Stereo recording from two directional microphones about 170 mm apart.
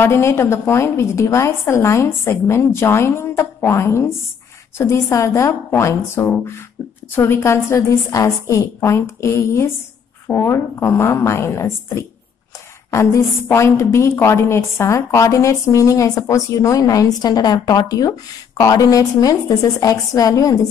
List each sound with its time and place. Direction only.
0.0 s a woman's voice: 15° left (ahead or behind)